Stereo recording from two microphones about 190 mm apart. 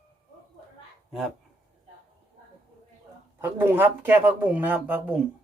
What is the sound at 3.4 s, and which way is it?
Speech, 10° right (ahead or behind).